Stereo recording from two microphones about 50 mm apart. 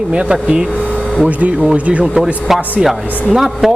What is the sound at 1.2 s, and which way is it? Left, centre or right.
Speech, right.